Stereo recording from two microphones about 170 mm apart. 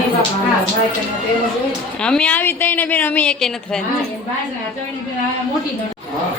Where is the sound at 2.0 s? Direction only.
5° left (ahead or behind).